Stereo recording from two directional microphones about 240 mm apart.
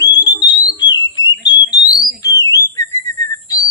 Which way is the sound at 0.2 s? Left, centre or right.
Centre.